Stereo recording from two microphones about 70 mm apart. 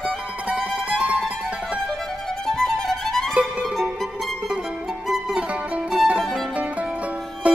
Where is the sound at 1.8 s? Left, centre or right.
Centre.